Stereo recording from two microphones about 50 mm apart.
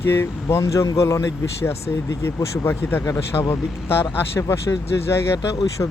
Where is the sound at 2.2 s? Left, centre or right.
Left.